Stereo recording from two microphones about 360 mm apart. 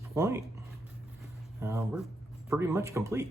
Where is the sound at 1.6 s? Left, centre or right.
Centre.